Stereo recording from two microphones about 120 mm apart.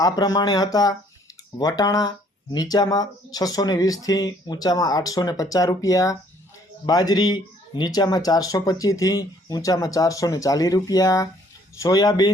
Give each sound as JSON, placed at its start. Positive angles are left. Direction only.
{"t": 0.0, "sound": "speech", "side_deg": 30}